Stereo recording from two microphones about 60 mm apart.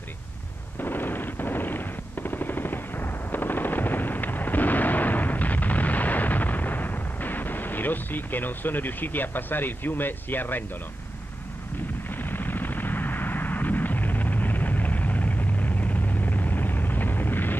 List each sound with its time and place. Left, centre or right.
0.7 s machine gun: left
12.2 s vehicle: left